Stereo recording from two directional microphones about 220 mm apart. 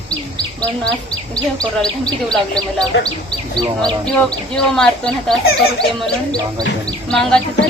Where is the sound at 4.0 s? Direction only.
5° left (ahead or behind).